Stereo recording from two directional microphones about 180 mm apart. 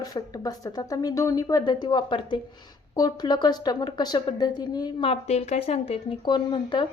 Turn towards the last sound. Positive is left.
turn(degrees=25)  # may be behind; listen again after turning